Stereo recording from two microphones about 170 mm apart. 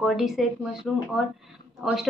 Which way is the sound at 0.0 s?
Centre (ahead or behind).